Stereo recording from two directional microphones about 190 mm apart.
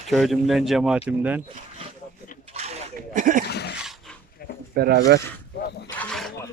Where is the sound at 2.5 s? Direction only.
35° right (ahead or behind).